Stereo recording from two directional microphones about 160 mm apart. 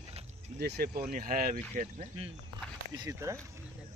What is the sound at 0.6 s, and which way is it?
Speech, 80° right.